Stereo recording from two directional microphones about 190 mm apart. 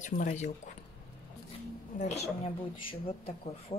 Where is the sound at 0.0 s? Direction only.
40° left (ahead or behind).